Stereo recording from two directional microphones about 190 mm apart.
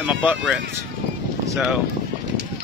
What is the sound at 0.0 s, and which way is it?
Speech, 5° right (ahead or behind).